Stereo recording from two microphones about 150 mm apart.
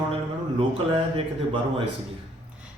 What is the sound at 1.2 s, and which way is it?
Speech, 35° right (ahead or behind).